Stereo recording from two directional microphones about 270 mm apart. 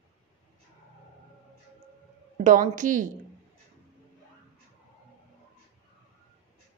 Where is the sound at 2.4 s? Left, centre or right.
Right.